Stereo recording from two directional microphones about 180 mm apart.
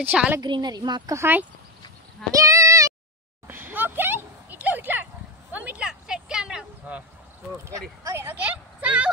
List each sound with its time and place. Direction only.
0.0 s a woman's voice: 10° right (ahead or behind)
0.4 s a woman's voice: 25° right (ahead or behind)
2.3 s child singing: 20° right (ahead or behind)
3.4 s a sound: 10° right (ahead or behind)
8.0 s a woman's voice: 15° right (ahead or behind)